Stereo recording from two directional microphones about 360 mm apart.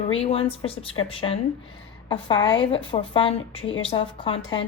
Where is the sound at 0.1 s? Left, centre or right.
Centre.